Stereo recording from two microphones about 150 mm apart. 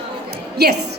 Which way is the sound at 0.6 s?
90° right.